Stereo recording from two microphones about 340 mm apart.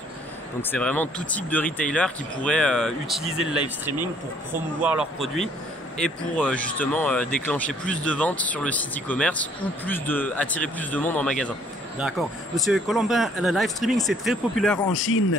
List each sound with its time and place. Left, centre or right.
0.6 s speech: centre
14.9 s a man's voice: left